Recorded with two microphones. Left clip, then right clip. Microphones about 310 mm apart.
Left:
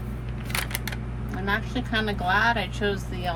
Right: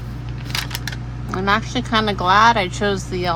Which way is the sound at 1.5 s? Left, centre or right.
Right.